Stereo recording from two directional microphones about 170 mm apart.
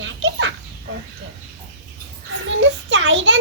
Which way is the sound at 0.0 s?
90° right.